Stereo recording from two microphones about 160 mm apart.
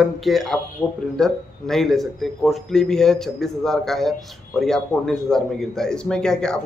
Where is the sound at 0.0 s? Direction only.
Centre (ahead or behind).